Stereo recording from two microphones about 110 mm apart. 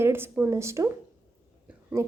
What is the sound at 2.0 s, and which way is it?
Speech, 25° right (ahead or behind).